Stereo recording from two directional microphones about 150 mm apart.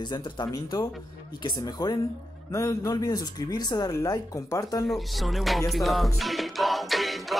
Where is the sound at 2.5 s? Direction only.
20° left (ahead or behind).